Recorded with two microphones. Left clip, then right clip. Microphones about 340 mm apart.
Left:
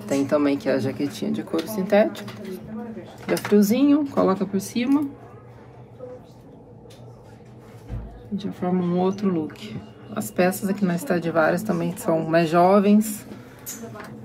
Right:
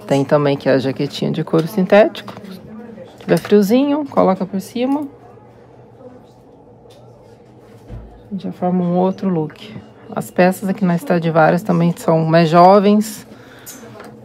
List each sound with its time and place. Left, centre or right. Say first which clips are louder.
0.3 s speech: right 7 dB; centre
3.3 s speech: right 6 dB; centre
8.4 s speech: right 6 dB; centre